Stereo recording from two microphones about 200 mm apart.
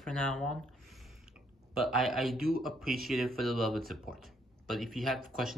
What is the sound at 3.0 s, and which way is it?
Speech, centre (ahead or behind).